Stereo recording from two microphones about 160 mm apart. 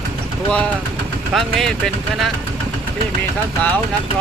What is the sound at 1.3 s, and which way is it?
Speech, centre (ahead or behind).